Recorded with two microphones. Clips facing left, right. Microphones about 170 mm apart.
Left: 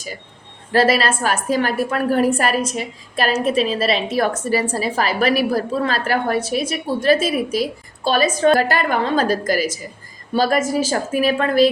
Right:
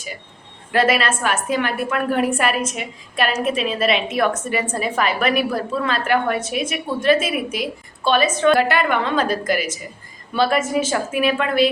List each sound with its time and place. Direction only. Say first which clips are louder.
0.7 s a woman's voice: left 2 dB; 35° left (ahead or behind)